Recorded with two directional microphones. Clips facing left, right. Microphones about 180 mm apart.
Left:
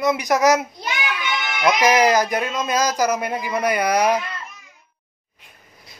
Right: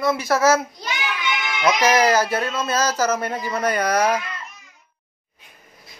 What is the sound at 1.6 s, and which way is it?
Speech, 15° left (ahead or behind).